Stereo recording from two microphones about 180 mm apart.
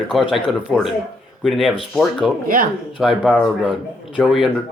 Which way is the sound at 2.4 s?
50° right (ahead or behind).